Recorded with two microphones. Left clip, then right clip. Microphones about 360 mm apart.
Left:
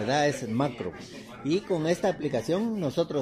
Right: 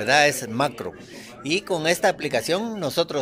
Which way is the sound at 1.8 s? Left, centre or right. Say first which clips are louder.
Right 6 dB; right.